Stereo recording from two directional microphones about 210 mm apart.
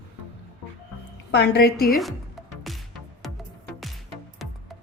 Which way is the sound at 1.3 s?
50° left (ahead or behind).